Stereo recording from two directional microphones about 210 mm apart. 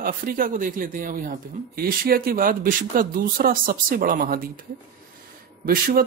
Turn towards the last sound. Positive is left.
turn(degrees=-45)  # may be behind; listen again after turning